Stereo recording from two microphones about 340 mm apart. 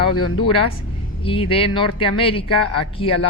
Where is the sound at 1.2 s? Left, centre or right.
Centre.